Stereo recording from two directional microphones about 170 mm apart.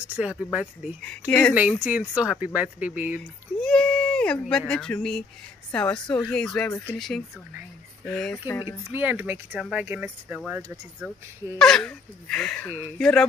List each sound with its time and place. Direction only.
0.1 s speech: 5° right (ahead or behind)
1.0 s speech: 5° left (ahead or behind)
1.5 s speech: 10° right (ahead or behind)
3.6 s speech: 5° left (ahead or behind)
8.5 s speech: 20° left (ahead or behind)
8.9 s speech: 10° right (ahead or behind); by 13.3 s 5° left (ahead or behind)